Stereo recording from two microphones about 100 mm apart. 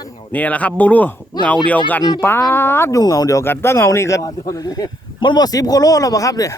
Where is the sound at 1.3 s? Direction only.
45° left (ahead or behind).